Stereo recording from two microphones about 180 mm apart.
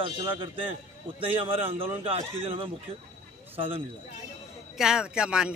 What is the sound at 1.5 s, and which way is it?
Speech, 30° right (ahead or behind).